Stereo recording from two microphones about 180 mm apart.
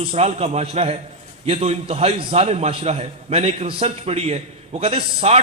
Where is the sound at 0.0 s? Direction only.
35° right (ahead or behind).